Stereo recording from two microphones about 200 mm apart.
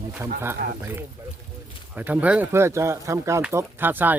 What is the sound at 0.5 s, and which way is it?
Speech, 45° right (ahead or behind).